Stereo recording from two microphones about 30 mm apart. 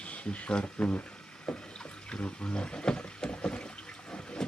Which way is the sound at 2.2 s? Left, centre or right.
Left.